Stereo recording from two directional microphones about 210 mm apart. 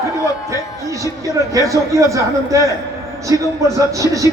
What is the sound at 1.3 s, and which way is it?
A man's voice, 15° right (ahead or behind).